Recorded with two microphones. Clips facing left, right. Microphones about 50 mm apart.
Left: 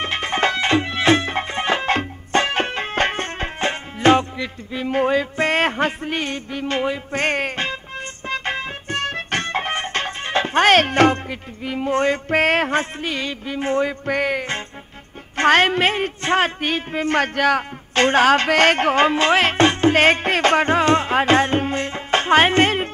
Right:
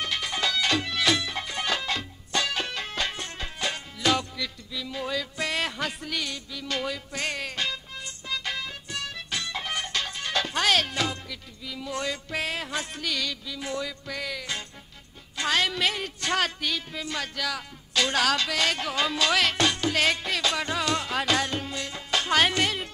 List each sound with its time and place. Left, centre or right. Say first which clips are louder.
0.0 s music: left 8 dB; left
13.0 s music: left 6 dB; left
15.3 s a woman's voice: left 11 dB; left